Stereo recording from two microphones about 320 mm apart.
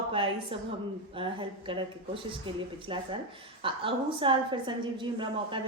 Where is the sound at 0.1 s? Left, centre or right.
Centre.